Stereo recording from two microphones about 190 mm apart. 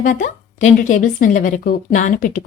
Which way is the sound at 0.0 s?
45° left (ahead or behind).